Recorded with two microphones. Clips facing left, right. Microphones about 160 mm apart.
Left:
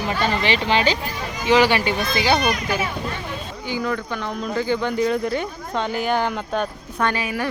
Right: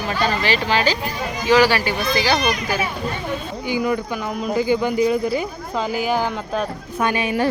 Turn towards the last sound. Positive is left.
turn(degrees=-10)  # may be behind; listen again after turning